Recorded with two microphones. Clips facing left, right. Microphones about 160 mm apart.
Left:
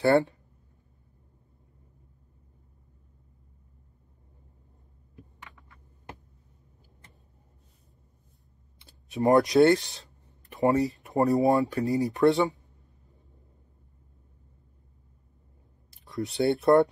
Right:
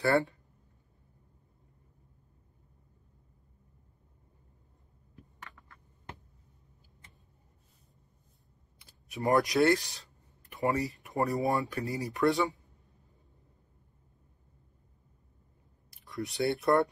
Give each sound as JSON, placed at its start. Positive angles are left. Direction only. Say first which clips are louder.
{"t": 0.0, "sound": "speech", "louder": "left 5 dB", "side_deg": 20}
{"t": 8.7, "sound": "speech", "louder": "left 9 dB", "side_deg": 20}
{"t": 16.2, "sound": "speech", "louder": "left 5 dB", "side_deg": 25}